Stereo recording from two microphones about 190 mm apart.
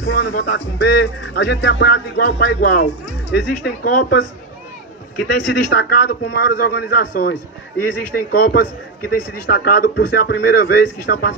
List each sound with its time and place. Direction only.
0.0 s speech: 60° left (ahead or behind)
5.4 s speech: 60° left (ahead or behind)